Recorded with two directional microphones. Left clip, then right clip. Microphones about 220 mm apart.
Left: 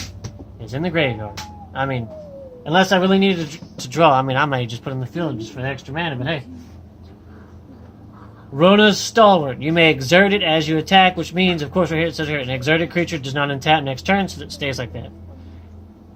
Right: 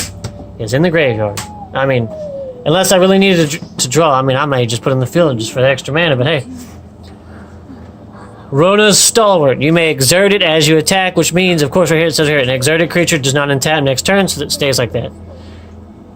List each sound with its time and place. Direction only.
0.6 s speech: 30° right (ahead or behind)
8.5 s speech: 35° right (ahead or behind)